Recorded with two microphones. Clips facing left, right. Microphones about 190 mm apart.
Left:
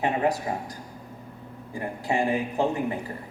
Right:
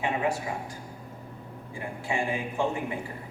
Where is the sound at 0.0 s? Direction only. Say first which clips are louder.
Left 4 dB; 40° left (ahead or behind).